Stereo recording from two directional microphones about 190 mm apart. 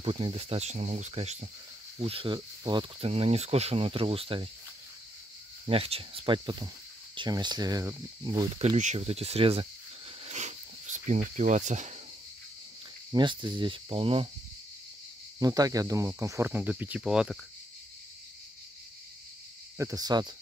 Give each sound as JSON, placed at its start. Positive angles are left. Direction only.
{"t": 0.0, "sound": "speech", "side_deg": -30}
{"t": 5.7, "sound": "speech", "side_deg": -30}
{"t": 10.2, "sound": "cricket", "side_deg": -40}
{"t": 13.1, "sound": "speech", "side_deg": -25}
{"t": 15.3, "sound": "speech", "side_deg": -20}
{"t": 19.8, "sound": "speech", "side_deg": -20}